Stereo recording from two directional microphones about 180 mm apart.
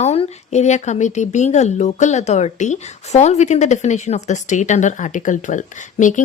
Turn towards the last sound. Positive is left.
turn(degrees=45)  # may be behind; listen again after turning